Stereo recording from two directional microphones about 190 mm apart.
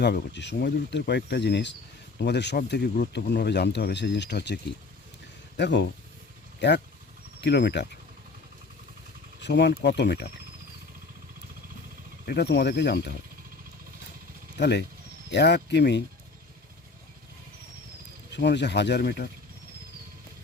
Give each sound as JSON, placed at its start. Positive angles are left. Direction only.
{"t": 0.0, "sound": "speech", "side_deg": 65}
{"t": 5.5, "sound": "speech", "side_deg": 65}
{"t": 9.4, "sound": "speech", "side_deg": 65}
{"t": 12.2, "sound": "speech", "side_deg": 60}
{"t": 14.6, "sound": "speech", "side_deg": 60}
{"t": 18.3, "sound": "speech", "side_deg": 65}